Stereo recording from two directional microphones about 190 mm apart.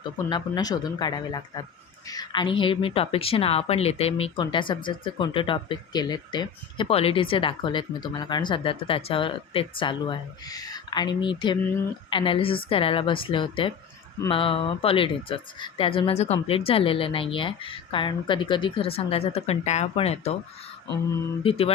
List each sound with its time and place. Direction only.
0.0 s a woman's voice: 25° left (ahead or behind)
21.4 s mantra: 30° left (ahead or behind)